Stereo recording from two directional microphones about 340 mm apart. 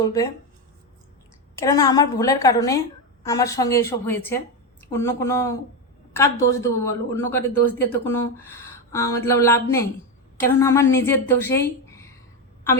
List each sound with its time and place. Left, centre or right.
0.0 s speech: centre
1.5 s speech: centre
11.5 s a sound: centre